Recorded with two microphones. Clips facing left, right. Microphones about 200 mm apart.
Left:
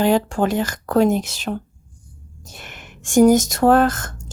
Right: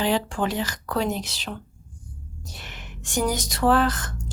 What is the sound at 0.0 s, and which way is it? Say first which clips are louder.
A woman's voice: left 6 dB; 45° left (ahead or behind).